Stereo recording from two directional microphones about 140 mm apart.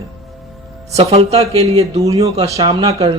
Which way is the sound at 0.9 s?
45° right (ahead or behind).